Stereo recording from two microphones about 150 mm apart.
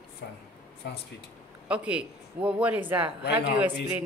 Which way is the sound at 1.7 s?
10° right (ahead or behind).